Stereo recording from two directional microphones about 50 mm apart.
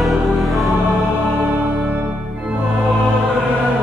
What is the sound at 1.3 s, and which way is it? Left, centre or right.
Music, right.